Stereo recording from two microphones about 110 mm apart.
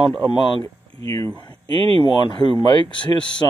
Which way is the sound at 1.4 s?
40° left (ahead or behind).